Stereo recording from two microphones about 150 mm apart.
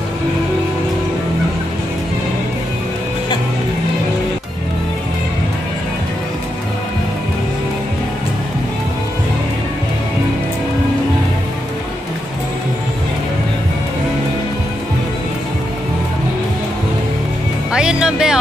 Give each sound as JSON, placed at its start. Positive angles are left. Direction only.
{"t": 17.7, "sound": "music", "side_deg": -5}